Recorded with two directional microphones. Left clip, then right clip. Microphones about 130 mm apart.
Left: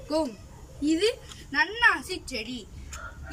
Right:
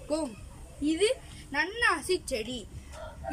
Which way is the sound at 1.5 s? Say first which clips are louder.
Left 5 dB; 40° right (ahead or behind).